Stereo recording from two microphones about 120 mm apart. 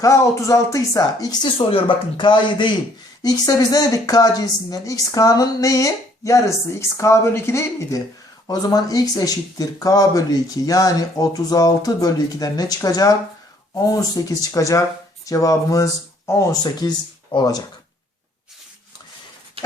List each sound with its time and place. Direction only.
0.0 s a woman's voice: 25° left (ahead or behind)
19.6 s dog: 50° right (ahead or behind)